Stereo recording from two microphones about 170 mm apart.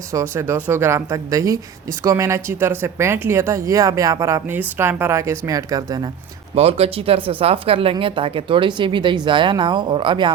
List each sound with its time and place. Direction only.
0.1 s speech: 15° right (ahead or behind)
6.6 s speech: 35° right (ahead or behind)